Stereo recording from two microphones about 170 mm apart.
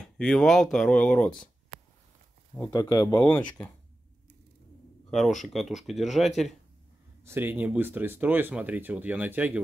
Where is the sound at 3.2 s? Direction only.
10° left (ahead or behind).